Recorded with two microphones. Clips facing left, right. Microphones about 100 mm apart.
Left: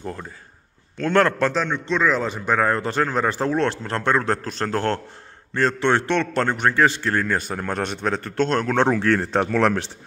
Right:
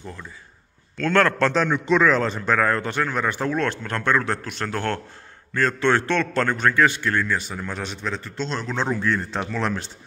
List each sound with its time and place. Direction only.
0.0 s a man's voice: 45° left (ahead or behind)
0.9 s a man's voice: 20° left (ahead or behind)
1.4 s a man's voice: 5° left (ahead or behind)
2.0 s speech: 10° left (ahead or behind)
2.6 s a man's voice: 25° left (ahead or behind); by 9.8 s 60° left (ahead or behind)